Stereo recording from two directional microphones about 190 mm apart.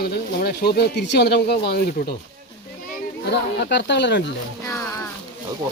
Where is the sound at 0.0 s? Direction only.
55° left (ahead or behind).